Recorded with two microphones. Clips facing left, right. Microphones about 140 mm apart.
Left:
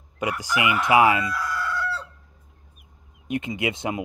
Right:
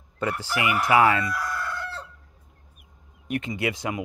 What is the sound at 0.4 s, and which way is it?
Chicken, 20° left (ahead or behind).